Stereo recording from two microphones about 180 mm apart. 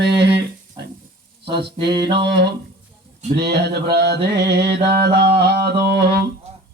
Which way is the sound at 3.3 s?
70° right (ahead or behind).